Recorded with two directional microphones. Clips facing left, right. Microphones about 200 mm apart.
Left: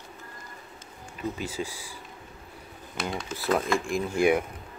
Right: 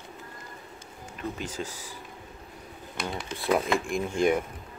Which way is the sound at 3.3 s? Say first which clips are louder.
Right 1 dB; centre (ahead or behind).